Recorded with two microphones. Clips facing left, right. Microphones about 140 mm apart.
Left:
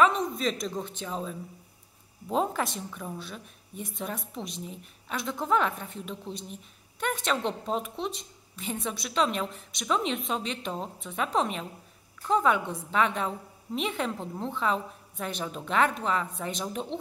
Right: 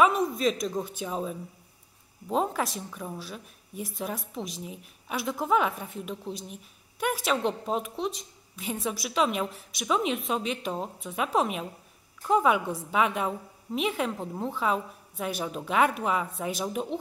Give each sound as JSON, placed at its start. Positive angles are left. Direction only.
{"t": 0.0, "sound": "a woman's voice", "side_deg": -5}